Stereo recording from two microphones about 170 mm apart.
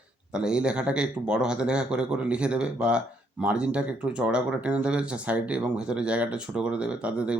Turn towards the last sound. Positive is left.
turn(degrees=-5)  # may be behind; listen again after turning